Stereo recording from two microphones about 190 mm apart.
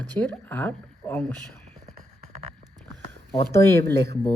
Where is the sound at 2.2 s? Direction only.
35° right (ahead or behind).